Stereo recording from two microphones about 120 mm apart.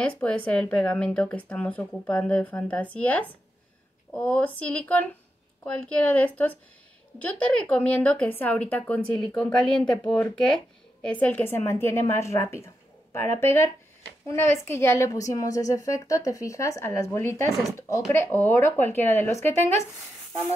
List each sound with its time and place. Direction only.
0.0 s a woman's voice: 10° left (ahead or behind)
19.4 s speech: 70° right (ahead or behind)